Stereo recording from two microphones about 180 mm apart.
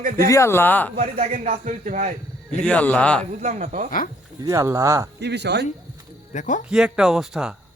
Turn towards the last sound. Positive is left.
turn(degrees=-5)  # may be behind; listen again after turning